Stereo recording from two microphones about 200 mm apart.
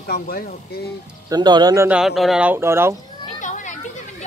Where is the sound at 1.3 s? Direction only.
20° right (ahead or behind).